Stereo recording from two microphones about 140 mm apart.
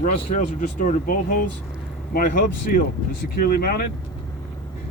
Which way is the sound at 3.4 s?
90° left.